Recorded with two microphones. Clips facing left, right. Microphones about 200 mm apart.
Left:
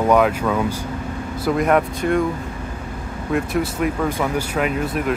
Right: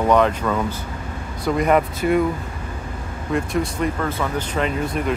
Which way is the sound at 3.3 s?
5° left (ahead or behind).